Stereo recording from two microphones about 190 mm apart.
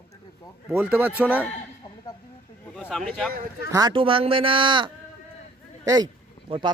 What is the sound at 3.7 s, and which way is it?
A man's voice, 20° right (ahead or behind).